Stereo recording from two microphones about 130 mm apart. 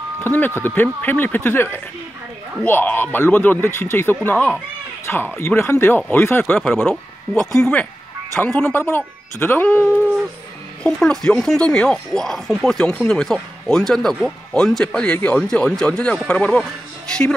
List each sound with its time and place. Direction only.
0.2 s speech: 15° left (ahead or behind)